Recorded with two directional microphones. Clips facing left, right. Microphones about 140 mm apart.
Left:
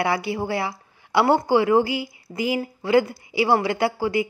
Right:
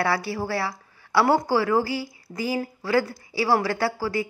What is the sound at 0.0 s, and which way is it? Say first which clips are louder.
A woman's voice: left 2 dB; 20° left (ahead or behind).